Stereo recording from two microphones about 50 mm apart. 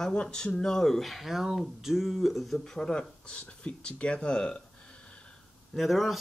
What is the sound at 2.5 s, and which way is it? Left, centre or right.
Speech, centre.